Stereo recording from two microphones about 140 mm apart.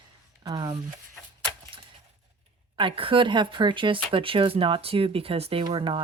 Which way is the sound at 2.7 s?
40° right (ahead or behind).